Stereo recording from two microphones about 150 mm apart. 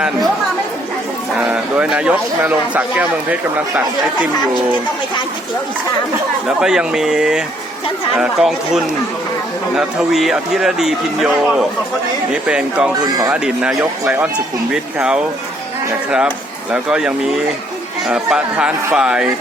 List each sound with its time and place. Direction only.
1.4 s speech: 5° right (ahead or behind)
6.5 s speech: 5° right (ahead or behind)